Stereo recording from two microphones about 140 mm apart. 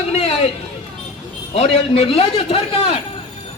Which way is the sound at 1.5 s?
45° left (ahead or behind).